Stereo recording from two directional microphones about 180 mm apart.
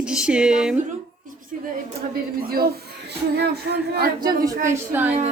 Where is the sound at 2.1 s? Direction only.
55° right (ahead or behind).